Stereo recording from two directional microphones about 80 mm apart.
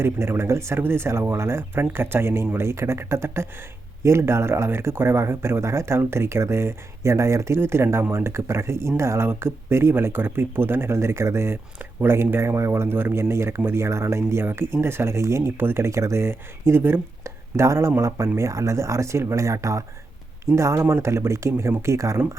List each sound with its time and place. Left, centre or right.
0.0 s speech: right